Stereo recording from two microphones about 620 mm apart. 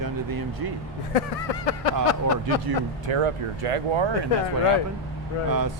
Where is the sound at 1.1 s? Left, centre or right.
Left.